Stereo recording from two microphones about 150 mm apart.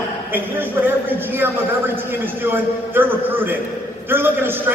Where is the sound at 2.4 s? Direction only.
15° right (ahead or behind).